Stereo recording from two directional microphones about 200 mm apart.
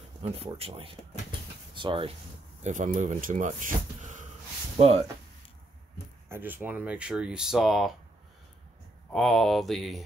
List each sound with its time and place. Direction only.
0.2 s speech: 30° right (ahead or behind)
2.6 s speech: 40° right (ahead or behind)
6.2 s speech: 10° right (ahead or behind)
9.1 s speech: centre (ahead or behind)